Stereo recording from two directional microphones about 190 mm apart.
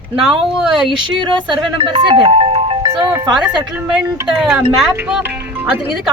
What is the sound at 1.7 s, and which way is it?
Music, 25° right (ahead or behind).